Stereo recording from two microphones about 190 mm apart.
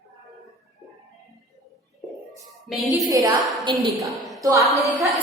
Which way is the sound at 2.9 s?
20° right (ahead or behind).